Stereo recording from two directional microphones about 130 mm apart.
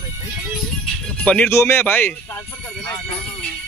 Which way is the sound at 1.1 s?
10° left (ahead or behind).